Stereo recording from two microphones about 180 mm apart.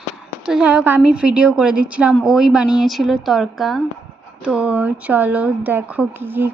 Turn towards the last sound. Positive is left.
turn(degrees=-10)  # may be behind; listen again after turning